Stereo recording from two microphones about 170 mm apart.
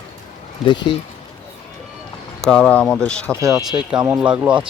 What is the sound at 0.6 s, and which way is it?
Speech, 30° left (ahead or behind).